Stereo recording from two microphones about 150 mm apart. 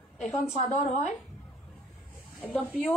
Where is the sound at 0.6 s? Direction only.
50° left (ahead or behind).